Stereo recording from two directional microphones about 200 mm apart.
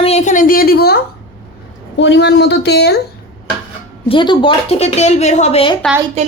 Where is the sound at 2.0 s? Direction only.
60° left (ahead or behind).